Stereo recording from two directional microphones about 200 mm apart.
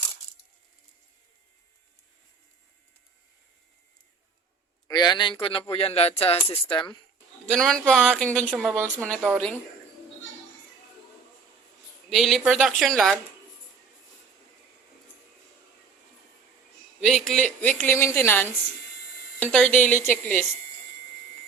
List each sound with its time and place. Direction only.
4.9 s speech: 20° left (ahead or behind)
7.5 s a woman's voice: centre (ahead or behind)
12.0 s a woman's voice: centre (ahead or behind)
17.0 s a woman's voice: centre (ahead or behind)